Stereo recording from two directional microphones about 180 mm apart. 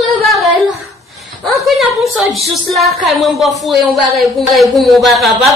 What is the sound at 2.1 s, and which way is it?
A woman's voice, centre (ahead or behind).